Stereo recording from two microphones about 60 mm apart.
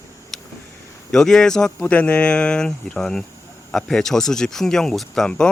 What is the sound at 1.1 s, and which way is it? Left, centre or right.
Speech, centre.